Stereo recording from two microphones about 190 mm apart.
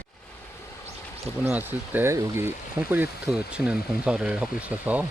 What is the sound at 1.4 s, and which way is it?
Speech, 10° right (ahead or behind).